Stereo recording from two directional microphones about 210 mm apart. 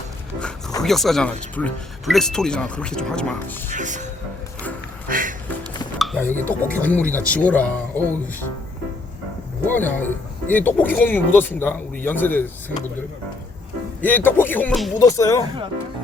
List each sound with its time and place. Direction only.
0.8 s speech: centre (ahead or behind)
3.7 s speech: 35° right (ahead or behind)
5.0 s music: 40° right (ahead or behind)
6.0 s speech: 5° left (ahead or behind)
9.6 s speech: 10° left (ahead or behind)
14.0 s speech: 10° left (ahead or behind)
14.9 s speech: 15° left (ahead or behind)